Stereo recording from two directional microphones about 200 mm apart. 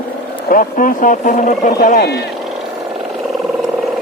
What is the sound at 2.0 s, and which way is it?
Speech, 55° left (ahead or behind).